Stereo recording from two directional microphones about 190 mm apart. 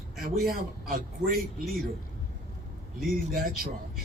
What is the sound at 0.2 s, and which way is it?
A man's voice, 50° right (ahead or behind).